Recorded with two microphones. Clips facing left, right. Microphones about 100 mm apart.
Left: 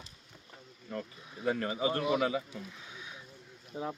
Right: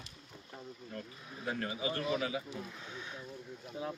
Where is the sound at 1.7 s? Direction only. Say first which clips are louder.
Left 5 dB; 40° left (ahead or behind).